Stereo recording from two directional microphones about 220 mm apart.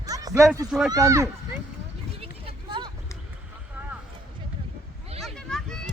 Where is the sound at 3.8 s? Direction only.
10° right (ahead or behind).